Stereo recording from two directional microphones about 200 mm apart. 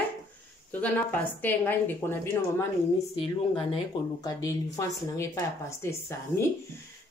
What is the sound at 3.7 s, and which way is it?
A woman's voice, 15° left (ahead or behind).